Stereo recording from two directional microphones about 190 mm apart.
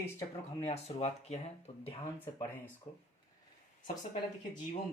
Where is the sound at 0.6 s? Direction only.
35° left (ahead or behind).